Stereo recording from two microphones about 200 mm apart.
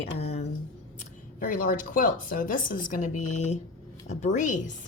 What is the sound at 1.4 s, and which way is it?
A woman's voice, 45° left (ahead or behind).